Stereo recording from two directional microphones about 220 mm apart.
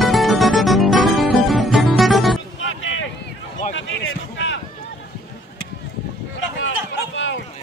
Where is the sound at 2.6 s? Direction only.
60° left (ahead or behind).